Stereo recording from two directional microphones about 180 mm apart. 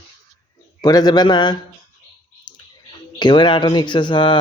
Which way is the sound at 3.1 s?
25° left (ahead or behind).